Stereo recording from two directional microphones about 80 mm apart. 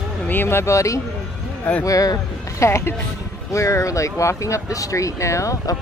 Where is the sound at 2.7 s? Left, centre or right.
Left.